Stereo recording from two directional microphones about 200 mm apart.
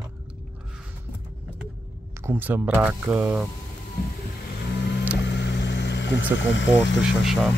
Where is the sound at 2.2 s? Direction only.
10° right (ahead or behind).